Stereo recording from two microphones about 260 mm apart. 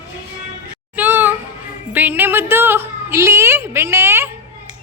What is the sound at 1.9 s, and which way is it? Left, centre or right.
A woman's voice, centre.